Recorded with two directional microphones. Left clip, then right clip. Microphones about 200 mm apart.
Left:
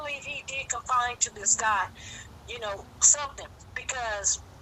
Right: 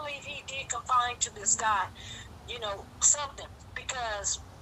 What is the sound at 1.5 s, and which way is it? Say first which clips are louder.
A woman's voice: left 1 dB; 20° left (ahead or behind).